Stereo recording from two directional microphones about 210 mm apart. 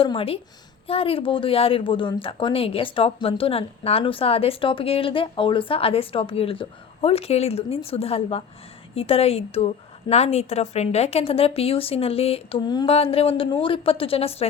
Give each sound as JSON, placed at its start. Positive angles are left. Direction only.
{"t": 0.0, "sound": "speech", "side_deg": 25}